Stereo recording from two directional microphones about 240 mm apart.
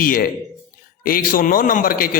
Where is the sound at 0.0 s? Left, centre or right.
Left.